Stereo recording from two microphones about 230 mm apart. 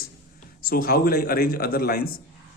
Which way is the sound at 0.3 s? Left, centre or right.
Left.